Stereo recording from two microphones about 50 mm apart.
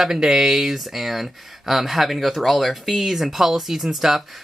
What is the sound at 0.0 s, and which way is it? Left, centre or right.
Speech, centre.